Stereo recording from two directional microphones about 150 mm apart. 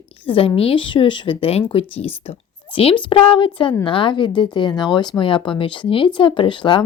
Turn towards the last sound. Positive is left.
turn(degrees=30)  # may be behind; listen again after turning